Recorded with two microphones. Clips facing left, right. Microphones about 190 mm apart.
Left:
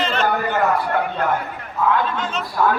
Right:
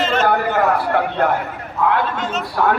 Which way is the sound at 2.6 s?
65° right (ahead or behind).